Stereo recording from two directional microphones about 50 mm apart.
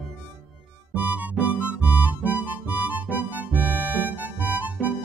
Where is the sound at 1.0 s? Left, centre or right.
Right.